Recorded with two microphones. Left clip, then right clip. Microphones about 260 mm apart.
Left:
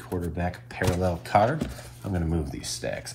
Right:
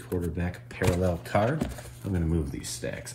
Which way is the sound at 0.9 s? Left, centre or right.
Left.